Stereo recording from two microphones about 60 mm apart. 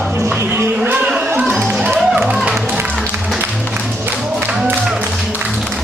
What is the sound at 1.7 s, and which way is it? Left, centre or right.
Music, centre.